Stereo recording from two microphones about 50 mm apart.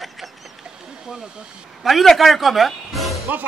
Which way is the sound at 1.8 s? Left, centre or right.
Centre.